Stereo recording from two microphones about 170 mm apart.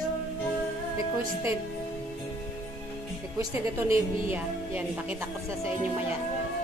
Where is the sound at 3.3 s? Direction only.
15° right (ahead or behind).